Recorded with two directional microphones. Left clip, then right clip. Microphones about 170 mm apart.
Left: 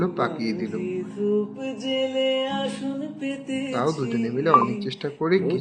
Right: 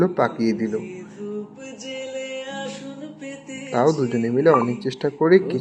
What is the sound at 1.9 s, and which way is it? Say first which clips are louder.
Music: left 7 dB; 45° left (ahead or behind).